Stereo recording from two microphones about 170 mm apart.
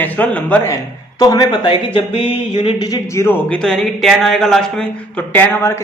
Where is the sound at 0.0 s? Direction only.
10° left (ahead or behind).